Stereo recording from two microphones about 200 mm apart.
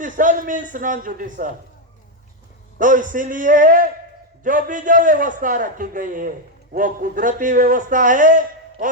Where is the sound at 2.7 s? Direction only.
40° right (ahead or behind).